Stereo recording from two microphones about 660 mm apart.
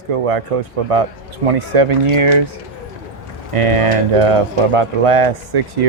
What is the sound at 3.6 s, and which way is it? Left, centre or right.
Speech, right.